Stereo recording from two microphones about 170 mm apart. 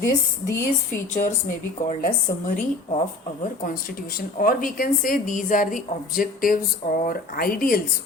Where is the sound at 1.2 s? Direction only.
55° left (ahead or behind).